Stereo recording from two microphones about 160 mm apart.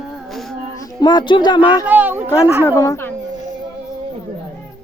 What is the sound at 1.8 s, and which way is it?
Speech, 10° right (ahead or behind).